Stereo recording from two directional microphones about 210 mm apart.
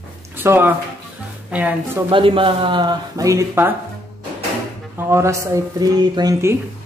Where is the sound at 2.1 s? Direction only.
25° right (ahead or behind).